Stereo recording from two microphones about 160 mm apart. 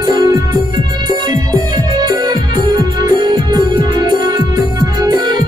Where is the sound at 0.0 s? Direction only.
25° right (ahead or behind).